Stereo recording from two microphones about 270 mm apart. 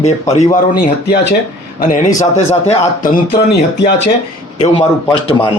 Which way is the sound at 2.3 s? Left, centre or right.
Left.